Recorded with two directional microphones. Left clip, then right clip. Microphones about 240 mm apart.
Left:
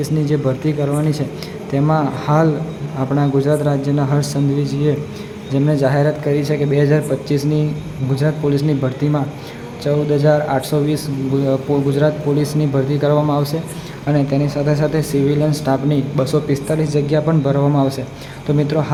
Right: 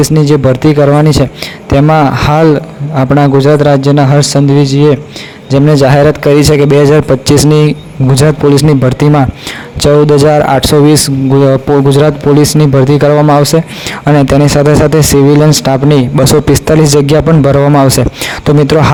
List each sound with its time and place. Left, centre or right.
0.0 s a man's voice: right